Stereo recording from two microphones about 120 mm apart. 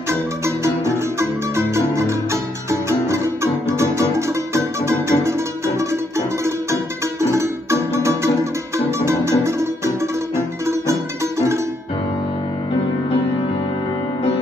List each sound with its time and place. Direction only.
2.7 s music: 25° right (ahead or behind)
4.6 s music: 25° right (ahead or behind)